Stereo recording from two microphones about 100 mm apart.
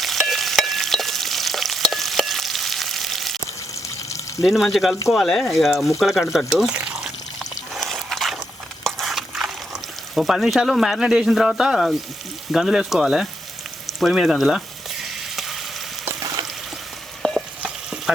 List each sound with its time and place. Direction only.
0.0 s stir: centre (ahead or behind)
3.8 s water: 30° left (ahead or behind)
4.4 s speech: centre (ahead or behind)
6.7 s pour: 10° right (ahead or behind)
7.7 s a sound: centre (ahead or behind)
10.2 s speech: centre (ahead or behind)
13.8 s frying: centre (ahead or behind)
17.2 s frying: 5° left (ahead or behind)
17.6 s stir: 5° right (ahead or behind)